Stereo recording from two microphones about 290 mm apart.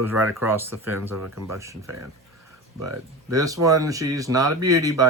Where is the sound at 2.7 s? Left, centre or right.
Right.